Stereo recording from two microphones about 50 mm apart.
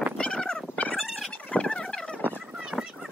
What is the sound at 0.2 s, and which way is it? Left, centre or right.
Turkey, centre.